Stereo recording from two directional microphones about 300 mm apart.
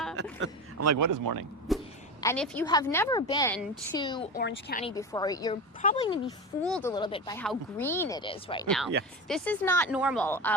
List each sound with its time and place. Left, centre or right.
0.8 s a man's voice: right
1.7 s a sound: centre
2.2 s speech: centre
4.4 s speech: left
4.9 s speech: centre
6.6 s speech: centre
6.9 s speech: centre
8.6 s speech: centre
10.2 s speech: centre